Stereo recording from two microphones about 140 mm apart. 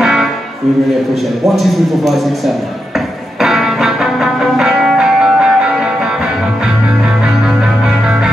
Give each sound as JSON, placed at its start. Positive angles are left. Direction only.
{"t": 0.0, "sound": "music", "side_deg": -5}
{"t": 1.4, "sound": "a man's voice", "side_deg": 0}
{"t": 3.3, "sound": "music", "side_deg": 0}